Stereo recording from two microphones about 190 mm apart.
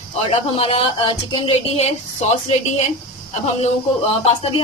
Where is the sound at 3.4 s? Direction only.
30° left (ahead or behind).